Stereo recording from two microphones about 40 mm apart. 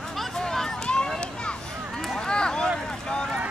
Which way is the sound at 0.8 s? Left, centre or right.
Left.